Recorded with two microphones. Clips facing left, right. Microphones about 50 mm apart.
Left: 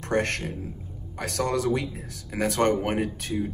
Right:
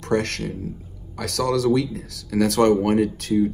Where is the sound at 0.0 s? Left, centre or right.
Left.